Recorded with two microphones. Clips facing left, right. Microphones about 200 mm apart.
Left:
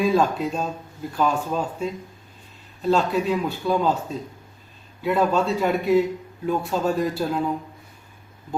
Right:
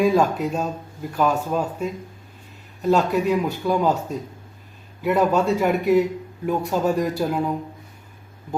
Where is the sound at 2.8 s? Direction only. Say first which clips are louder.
Right 2 dB; 15° right (ahead or behind).